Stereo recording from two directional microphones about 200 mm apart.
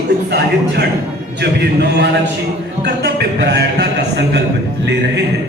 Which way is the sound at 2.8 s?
55° right (ahead or behind).